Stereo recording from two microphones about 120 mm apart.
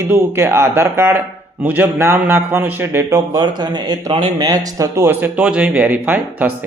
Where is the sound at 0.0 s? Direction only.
20° right (ahead or behind).